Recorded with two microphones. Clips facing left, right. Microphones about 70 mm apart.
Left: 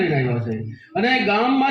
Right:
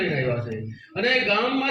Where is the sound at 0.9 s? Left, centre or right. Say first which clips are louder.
Left 4 dB; left.